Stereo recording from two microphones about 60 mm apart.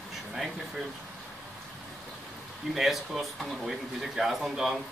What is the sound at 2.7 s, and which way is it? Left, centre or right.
Speech, centre.